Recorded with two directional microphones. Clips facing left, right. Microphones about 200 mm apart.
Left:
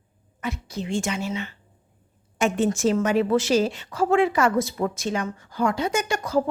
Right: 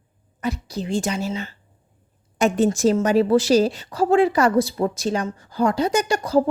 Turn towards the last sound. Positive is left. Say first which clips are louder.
# right 4 dB
turn(degrees=-35)  # may be behind; listen again after turning